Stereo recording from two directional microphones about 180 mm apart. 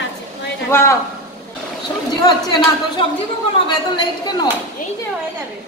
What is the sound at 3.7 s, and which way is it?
Speech, 25° left (ahead or behind).